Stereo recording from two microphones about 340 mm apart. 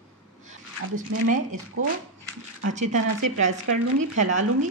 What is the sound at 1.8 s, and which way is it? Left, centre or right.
Speech, right.